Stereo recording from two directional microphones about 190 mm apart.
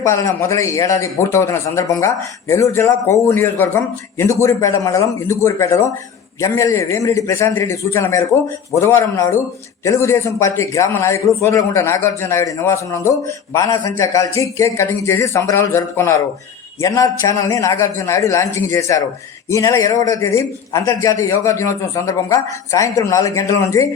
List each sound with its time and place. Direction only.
0.0 s a man's voice: 15° left (ahead or behind)